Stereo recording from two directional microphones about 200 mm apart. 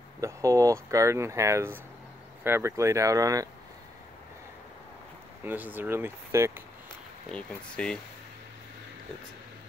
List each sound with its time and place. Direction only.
0.2 s speech: 15° right (ahead or behind)
5.4 s speech: 10° right (ahead or behind)
7.2 s speech: 5° left (ahead or behind)